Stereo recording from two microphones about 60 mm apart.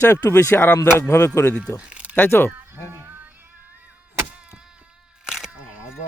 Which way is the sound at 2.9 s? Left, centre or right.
Right.